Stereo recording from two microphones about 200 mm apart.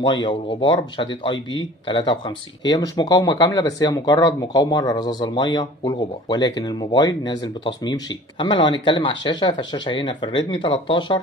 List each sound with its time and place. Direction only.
0.0 s speech: 20° left (ahead or behind)